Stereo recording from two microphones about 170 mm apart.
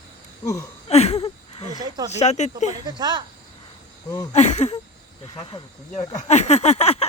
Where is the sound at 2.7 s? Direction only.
25° right (ahead or behind).